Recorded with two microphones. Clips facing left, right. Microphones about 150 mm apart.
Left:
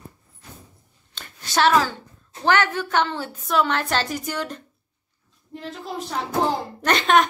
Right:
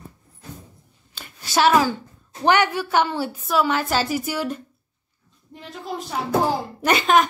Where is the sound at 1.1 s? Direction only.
5° right (ahead or behind).